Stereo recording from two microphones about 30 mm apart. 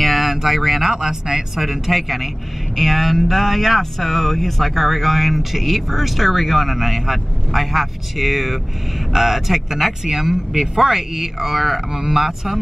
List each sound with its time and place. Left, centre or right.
0.0 s a sound: centre
0.4 s speech: centre
1.6 s speech: centre
10.5 s speech: centre